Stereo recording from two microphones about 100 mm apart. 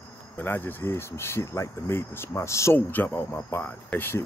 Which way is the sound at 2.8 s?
20° left (ahead or behind).